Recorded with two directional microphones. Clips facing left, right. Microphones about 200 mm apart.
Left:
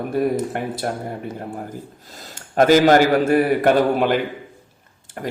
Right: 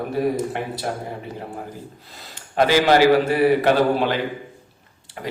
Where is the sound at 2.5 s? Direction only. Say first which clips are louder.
Left 3 dB; 45° left (ahead or behind).